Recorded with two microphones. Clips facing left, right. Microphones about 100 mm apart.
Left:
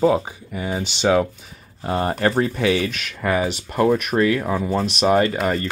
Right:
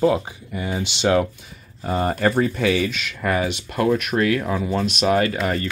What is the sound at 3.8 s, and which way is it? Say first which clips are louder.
Speech: left 2 dB; 35° left (ahead or behind).